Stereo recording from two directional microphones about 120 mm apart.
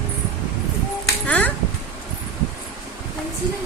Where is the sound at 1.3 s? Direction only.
15° left (ahead or behind).